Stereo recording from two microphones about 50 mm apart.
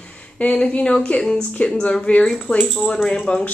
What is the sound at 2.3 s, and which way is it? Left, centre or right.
Speech, centre.